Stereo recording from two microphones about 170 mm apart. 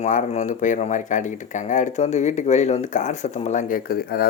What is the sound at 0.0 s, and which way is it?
Speech, 45° left (ahead or behind).